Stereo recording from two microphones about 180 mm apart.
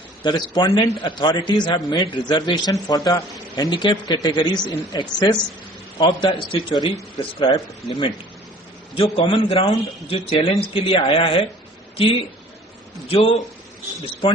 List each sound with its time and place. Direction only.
0.2 s a man's voice: 25° left (ahead or behind)
13.1 s a man's voice: 30° left (ahead or behind)